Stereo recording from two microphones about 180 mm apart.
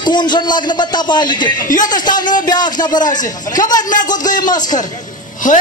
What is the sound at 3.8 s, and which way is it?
Speech, 45° left (ahead or behind).